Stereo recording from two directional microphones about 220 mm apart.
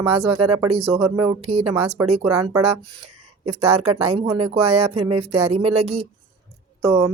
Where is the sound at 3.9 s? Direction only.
25° right (ahead or behind).